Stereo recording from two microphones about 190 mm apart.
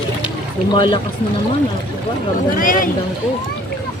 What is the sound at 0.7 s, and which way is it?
Speech, 25° left (ahead or behind).